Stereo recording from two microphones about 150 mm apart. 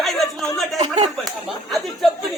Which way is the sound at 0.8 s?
50° right (ahead or behind).